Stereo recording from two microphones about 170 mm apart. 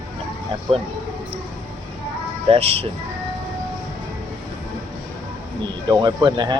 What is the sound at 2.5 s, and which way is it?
Speech, 35° right (ahead or behind).